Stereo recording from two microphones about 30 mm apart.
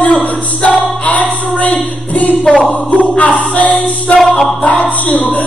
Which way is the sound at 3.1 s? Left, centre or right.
Left.